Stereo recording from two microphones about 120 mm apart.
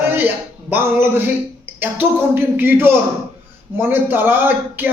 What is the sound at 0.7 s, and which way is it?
Speech, 20° right (ahead or behind).